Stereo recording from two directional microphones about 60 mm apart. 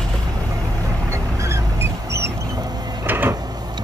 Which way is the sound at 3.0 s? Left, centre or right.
Right.